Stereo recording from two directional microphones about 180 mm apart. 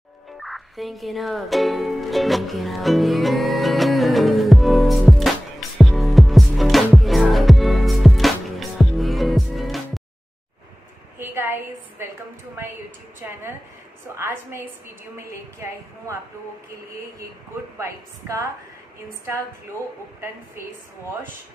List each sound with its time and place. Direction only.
0.4 s music: centre (ahead or behind)
11.1 s a sound: 10° right (ahead or behind)
14.1 s a woman's voice: 15° right (ahead or behind)
17.7 s a woman's voice: 15° right (ahead or behind)